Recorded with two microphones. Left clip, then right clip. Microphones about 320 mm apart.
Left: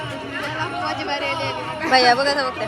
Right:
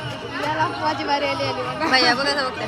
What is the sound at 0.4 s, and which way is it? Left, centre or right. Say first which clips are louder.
Chatter: right 4 dB; right.